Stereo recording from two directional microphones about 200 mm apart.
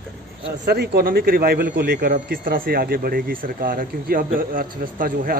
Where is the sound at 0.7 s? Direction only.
50° right (ahead or behind).